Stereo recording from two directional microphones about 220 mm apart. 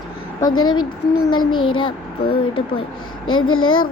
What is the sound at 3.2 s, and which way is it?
Speech, 70° left (ahead or behind).